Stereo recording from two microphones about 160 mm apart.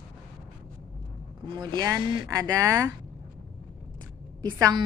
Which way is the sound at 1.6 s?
25° right (ahead or behind).